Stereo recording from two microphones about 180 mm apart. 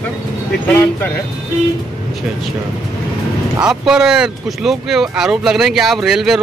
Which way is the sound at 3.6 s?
5° right (ahead or behind).